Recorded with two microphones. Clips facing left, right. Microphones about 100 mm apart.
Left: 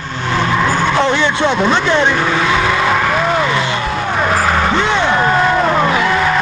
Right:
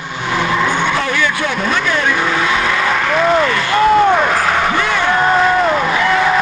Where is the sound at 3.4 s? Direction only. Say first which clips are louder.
Left 1 dB; 20° left (ahead or behind).